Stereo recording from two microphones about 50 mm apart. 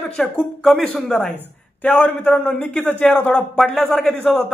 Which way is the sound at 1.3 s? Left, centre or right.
Left.